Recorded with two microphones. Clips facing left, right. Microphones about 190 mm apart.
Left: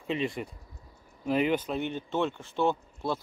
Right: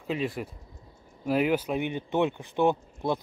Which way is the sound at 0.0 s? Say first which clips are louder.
Right 1 dB; centre (ahead or behind).